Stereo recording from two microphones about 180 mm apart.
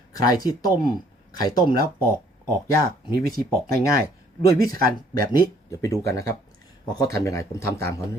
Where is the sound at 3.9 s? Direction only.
60° right (ahead or behind).